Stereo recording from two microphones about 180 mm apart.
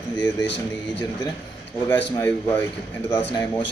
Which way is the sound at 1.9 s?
10° left (ahead or behind).